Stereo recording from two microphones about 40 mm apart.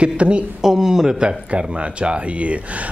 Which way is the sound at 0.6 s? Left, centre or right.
Centre.